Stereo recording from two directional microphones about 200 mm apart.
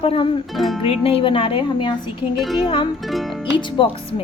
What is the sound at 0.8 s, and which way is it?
A woman's voice, 30° left (ahead or behind).